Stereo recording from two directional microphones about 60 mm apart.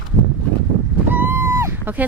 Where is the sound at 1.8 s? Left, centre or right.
Right.